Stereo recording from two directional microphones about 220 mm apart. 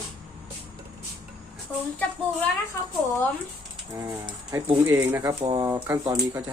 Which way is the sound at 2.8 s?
10° left (ahead or behind).